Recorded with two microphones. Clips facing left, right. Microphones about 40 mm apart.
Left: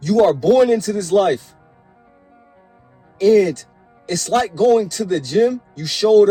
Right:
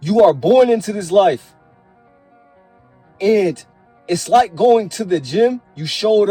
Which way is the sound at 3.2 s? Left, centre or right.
Right.